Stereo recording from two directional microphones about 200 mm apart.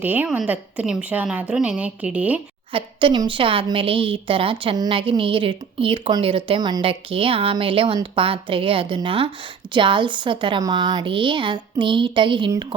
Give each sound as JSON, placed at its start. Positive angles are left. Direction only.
{"t": 0.0, "sound": "a woman's voice", "side_deg": -10}
{"t": 2.7, "sound": "a woman's voice", "side_deg": -25}